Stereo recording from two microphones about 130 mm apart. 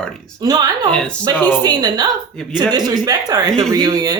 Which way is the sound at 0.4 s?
30° right (ahead or behind).